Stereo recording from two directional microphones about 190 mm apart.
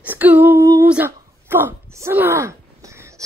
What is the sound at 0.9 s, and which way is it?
Speech, 10° right (ahead or behind).